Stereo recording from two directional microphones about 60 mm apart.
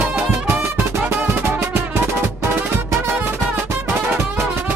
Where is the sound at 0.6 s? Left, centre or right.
Right.